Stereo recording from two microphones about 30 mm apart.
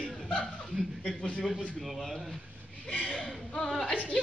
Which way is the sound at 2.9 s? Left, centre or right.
Left.